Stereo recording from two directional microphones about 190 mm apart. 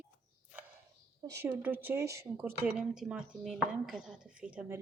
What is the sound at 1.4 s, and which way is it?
A woman's voice, 10° right (ahead or behind).